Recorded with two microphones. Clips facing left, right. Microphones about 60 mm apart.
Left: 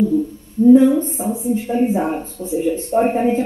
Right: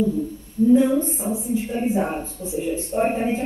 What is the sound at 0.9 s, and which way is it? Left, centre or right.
A woman's voice, left.